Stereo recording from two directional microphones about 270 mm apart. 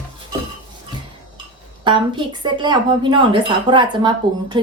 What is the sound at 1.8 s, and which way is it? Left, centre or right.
Speech, centre.